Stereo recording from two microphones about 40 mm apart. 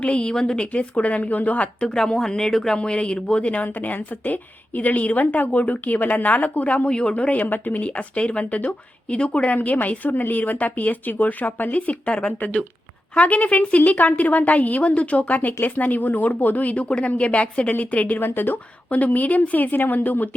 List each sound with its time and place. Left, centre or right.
0.0 s a woman's voice: left
0.7 s a woman's voice: left
1.9 s speech: centre
2.7 s a woman's voice: left
3.6 s a woman's voice: left
6.8 s a woman's voice: left
7.4 s a woman's voice: left
9.6 s a woman's voice: left
10.1 s a woman's voice: left
18.2 s a woman's voice: left
18.9 s a woman's voice: left